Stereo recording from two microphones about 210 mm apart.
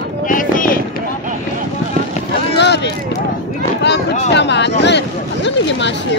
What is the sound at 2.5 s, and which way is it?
Run, 55° left (ahead or behind).